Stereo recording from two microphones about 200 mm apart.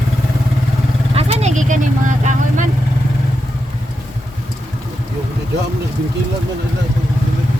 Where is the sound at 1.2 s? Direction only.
35° right (ahead or behind).